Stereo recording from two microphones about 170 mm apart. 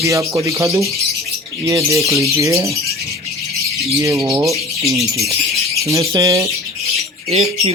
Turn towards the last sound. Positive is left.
turn(degrees=-35)  # may be behind; listen again after turning